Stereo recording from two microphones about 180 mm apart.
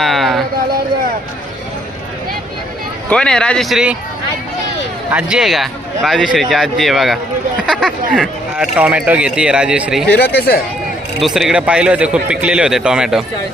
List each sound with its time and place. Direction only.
0.0 s a sound: centre (ahead or behind)
3.1 s speech: 5° left (ahead or behind)
5.1 s speech: 5° right (ahead or behind)
10.1 s speech: 65° left (ahead or behind)
11.2 s speech: centre (ahead or behind)